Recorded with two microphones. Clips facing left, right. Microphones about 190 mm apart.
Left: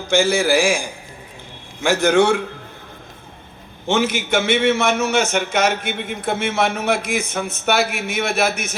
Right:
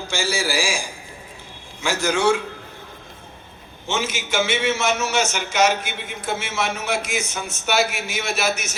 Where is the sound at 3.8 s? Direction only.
55° left (ahead or behind).